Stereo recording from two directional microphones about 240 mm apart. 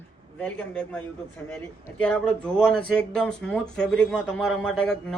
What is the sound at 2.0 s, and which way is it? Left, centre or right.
Speech, centre.